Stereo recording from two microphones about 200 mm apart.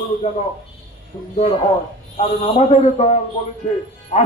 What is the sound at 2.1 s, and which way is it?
A man's voice, 35° left (ahead or behind).